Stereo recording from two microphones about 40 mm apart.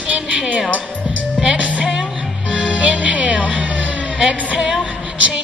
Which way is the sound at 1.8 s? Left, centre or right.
Centre.